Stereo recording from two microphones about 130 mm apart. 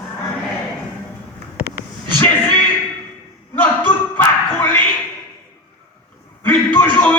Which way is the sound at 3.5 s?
15° left (ahead or behind).